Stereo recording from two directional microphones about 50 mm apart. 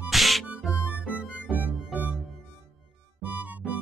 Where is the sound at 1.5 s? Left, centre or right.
Right.